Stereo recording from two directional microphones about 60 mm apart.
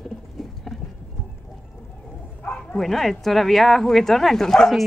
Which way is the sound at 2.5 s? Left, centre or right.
Centre.